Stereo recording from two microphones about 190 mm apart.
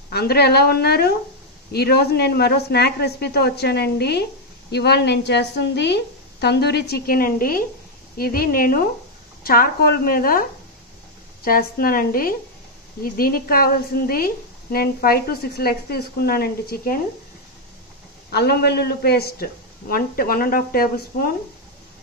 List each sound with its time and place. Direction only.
0.1 s a woman's voice: 55° left (ahead or behind)
11.4 s a woman's voice: 50° left (ahead or behind)
18.3 s a woman's voice: 60° left (ahead or behind)